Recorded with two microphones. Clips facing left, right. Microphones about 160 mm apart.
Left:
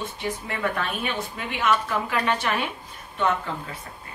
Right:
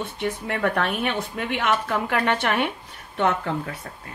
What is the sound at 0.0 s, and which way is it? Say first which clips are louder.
Speech: right 3 dB; 65° right (ahead or behind).